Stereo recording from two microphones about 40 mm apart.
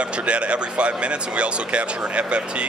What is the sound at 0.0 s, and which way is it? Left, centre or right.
Speech, right.